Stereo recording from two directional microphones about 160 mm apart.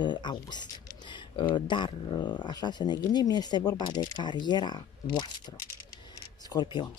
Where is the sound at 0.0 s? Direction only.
30° left (ahead or behind).